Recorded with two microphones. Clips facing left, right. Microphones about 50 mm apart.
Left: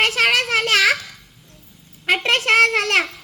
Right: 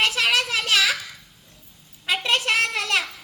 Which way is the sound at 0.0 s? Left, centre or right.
Left.